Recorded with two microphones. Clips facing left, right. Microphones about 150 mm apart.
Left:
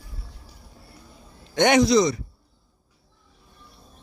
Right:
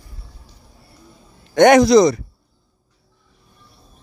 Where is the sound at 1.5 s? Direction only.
50° right (ahead or behind).